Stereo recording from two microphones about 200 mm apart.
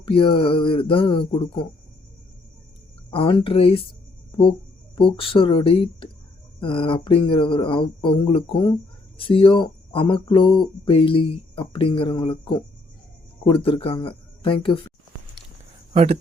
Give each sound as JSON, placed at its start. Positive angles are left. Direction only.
{"t": 0.0, "sound": "speech", "side_deg": 25}
{"t": 3.1, "sound": "speech", "side_deg": 25}
{"t": 15.9, "sound": "speech", "side_deg": -30}